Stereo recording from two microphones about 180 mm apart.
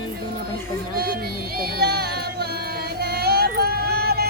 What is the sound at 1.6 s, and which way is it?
Music, 60° right (ahead or behind).